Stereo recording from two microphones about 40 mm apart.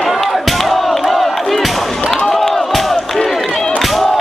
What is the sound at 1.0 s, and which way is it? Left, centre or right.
Crowd, centre.